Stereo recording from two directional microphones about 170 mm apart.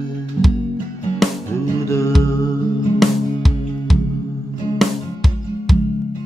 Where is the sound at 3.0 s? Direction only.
Centre (ahead or behind).